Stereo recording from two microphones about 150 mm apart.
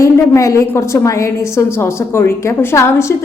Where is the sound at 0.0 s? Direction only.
20° left (ahead or behind).